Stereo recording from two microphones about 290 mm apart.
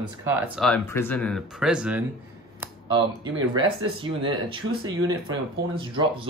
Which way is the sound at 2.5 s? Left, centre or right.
Centre.